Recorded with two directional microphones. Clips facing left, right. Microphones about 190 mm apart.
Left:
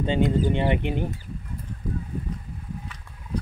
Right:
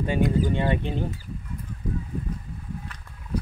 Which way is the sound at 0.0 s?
25° left (ahead or behind).